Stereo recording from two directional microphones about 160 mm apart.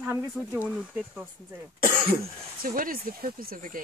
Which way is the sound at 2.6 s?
60° right (ahead or behind).